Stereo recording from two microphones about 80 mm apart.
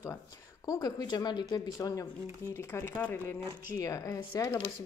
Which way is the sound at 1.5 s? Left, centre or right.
Left.